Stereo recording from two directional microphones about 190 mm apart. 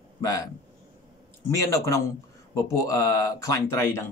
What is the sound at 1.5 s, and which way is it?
Speech, 15° left (ahead or behind).